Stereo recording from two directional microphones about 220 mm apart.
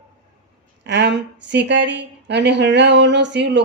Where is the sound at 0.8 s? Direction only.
50° right (ahead or behind).